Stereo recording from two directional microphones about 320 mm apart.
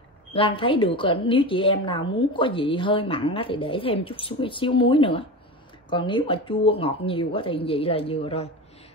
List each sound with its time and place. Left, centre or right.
0.3 s a woman's voice: centre